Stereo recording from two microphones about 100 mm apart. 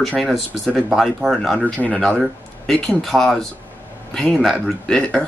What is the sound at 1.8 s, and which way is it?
Speech, 10° left (ahead or behind).